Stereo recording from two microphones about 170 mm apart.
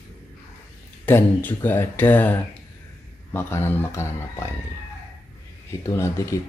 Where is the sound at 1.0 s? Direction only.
10° left (ahead or behind).